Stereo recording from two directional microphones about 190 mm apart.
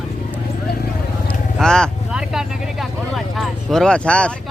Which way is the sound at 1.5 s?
5° left (ahead or behind).